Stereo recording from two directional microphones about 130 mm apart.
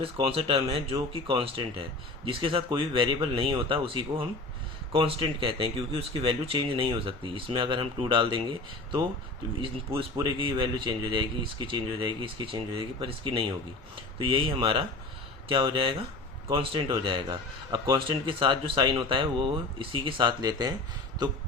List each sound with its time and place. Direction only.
0.0 s speech: 45° right (ahead or behind)
10.2 s a man's voice: 40° right (ahead or behind)